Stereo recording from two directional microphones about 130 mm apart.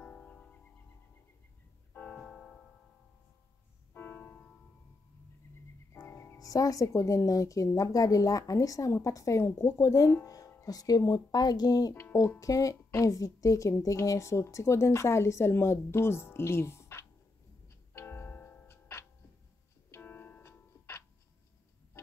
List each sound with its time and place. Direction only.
0.0 s music: 10° left (ahead or behind)
2.0 s music: 5° left (ahead or behind)
3.9 s music: 15° left (ahead or behind)
5.9 s speech: 20° left (ahead or behind)
17.9 s music: 15° left (ahead or behind)